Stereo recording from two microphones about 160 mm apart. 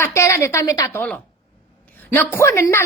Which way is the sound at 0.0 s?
20° left (ahead or behind).